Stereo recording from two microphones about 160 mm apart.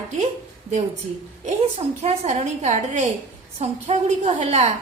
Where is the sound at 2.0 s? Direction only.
45° right (ahead or behind).